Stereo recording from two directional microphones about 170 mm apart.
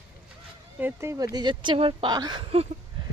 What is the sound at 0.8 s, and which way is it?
Speech, 15° right (ahead or behind).